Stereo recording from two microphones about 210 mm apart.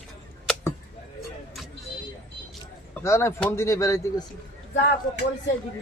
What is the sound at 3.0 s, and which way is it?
Speech, 15° left (ahead or behind).